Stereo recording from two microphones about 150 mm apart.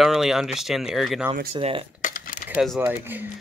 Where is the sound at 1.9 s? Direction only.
65° left (ahead or behind).